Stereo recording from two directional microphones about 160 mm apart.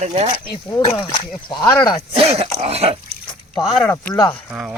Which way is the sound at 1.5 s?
25° left (ahead or behind).